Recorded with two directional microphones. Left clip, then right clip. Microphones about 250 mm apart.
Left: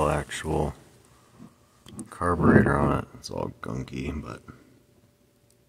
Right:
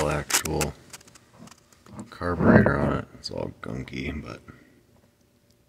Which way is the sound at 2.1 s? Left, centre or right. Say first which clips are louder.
Right 1 dB; centre.